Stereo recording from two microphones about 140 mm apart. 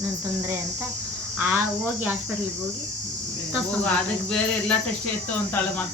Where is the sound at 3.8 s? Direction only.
10° left (ahead or behind).